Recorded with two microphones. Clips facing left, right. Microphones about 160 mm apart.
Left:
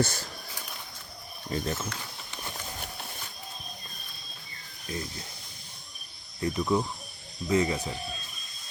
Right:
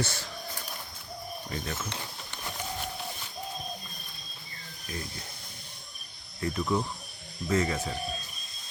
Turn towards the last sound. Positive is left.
turn(degrees=15)  # may be behind; listen again after turning